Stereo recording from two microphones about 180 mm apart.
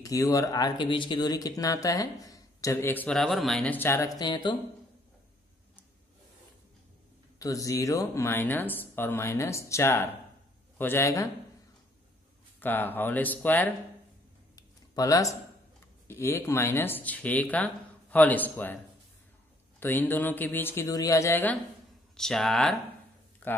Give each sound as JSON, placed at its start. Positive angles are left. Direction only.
{"t": 0.0, "sound": "speech", "side_deg": 20}
{"t": 7.3, "sound": "speech", "side_deg": 20}
{"t": 12.5, "sound": "speech", "side_deg": 10}
{"t": 14.5, "sound": "a sound", "side_deg": 20}
{"t": 16.1, "sound": "speech", "side_deg": 15}
{"t": 19.8, "sound": "speech", "side_deg": 10}